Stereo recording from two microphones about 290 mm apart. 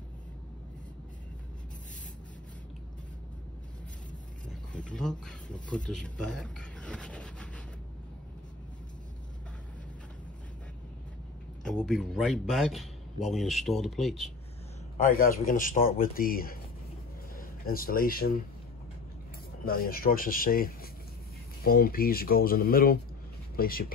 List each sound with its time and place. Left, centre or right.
4.7 s speech: centre
11.6 s speech: centre
15.0 s speech: left
19.6 s speech: left